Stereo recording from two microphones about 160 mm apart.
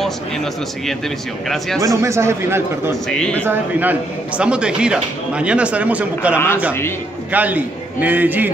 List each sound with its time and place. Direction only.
2.0 s speech: 15° right (ahead or behind)
3.1 s a man's voice: 5° left (ahead or behind)
3.4 s speech: 10° right (ahead or behind)
6.3 s speech: 15° left (ahead or behind)
7.3 s speech: 10° right (ahead or behind)